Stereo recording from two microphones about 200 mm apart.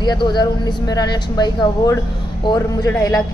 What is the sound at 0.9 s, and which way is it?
A woman's voice, 20° left (ahead or behind).